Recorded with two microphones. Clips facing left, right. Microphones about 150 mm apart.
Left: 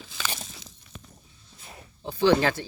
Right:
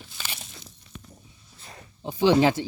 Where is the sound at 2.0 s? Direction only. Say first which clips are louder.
Right 2 dB; 15° right (ahead or behind).